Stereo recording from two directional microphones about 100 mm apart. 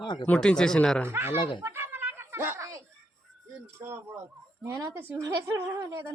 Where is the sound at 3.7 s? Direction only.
25° right (ahead or behind).